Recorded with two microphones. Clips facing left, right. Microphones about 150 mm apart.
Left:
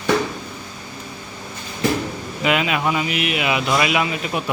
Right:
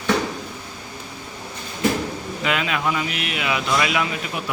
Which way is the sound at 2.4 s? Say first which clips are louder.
Left 4 dB; 15° left (ahead or behind).